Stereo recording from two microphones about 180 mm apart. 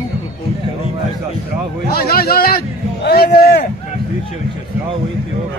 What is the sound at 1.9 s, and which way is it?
A man's voice, 60° left (ahead or behind).